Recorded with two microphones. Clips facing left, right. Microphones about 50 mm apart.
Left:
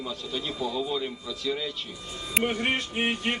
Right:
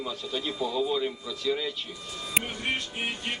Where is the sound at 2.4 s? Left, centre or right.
Left.